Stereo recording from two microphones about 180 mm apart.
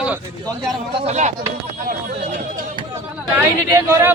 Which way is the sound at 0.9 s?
40° right (ahead or behind).